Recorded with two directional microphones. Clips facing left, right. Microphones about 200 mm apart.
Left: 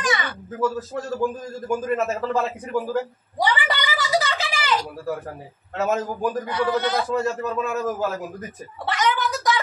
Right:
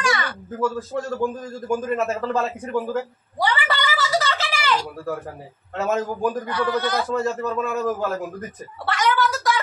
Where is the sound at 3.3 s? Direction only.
15° left (ahead or behind).